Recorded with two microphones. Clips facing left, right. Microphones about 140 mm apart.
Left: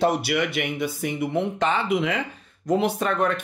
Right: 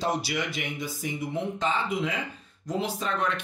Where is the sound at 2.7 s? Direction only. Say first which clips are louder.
Left 7 dB; 60° left (ahead or behind).